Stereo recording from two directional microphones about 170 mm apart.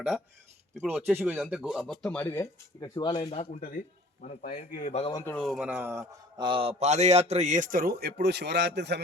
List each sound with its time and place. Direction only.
1.1 s speech: 5° right (ahead or behind); by 3.2 s 25° left (ahead or behind)
3.2 s speech: 40° left (ahead or behind)
4.2 s speech: 55° left (ahead or behind)
5.1 s speech: 10° left (ahead or behind)
5.4 s speech: centre (ahead or behind)
6.4 s a man's voice: 30° right (ahead or behind); by 9.0 s 90° right